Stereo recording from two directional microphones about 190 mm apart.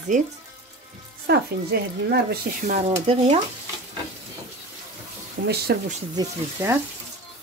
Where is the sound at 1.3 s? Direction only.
60° right (ahead or behind).